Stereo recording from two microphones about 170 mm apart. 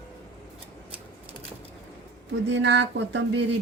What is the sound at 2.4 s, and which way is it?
Speech, 90° right.